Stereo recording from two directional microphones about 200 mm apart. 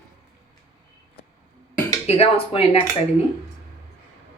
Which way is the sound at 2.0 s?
30° left (ahead or behind).